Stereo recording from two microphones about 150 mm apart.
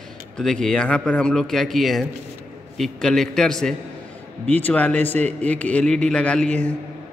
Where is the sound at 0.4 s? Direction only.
5° left (ahead or behind).